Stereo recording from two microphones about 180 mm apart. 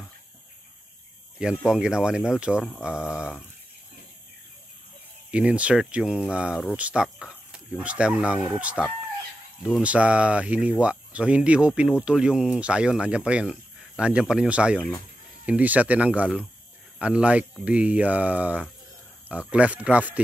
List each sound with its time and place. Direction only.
1.4 s speech: 5° right (ahead or behind)
5.3 s speech: 5° right (ahead or behind)